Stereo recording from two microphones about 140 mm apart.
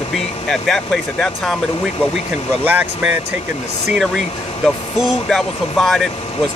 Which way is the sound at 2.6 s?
15° right (ahead or behind).